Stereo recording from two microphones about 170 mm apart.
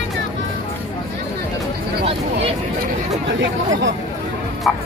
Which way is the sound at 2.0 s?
35° right (ahead or behind).